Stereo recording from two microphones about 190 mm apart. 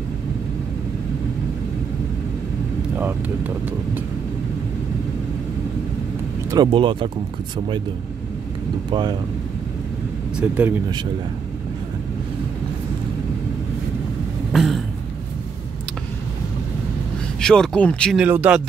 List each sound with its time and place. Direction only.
3.0 s speech: 10° right (ahead or behind)
6.5 s speech: 25° right (ahead or behind)
10.4 s speech: 10° right (ahead or behind)
14.5 s a sound: centre (ahead or behind)
17.4 s speech: 5° left (ahead or behind)
18.2 s speech: 5° right (ahead or behind)